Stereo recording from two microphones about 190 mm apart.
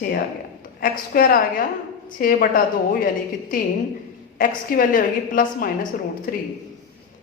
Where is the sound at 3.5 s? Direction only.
45° left (ahead or behind).